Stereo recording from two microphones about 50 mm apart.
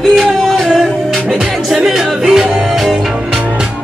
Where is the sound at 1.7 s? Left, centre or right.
Centre.